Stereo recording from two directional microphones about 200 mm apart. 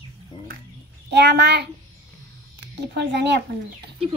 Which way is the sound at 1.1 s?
55° right (ahead or behind).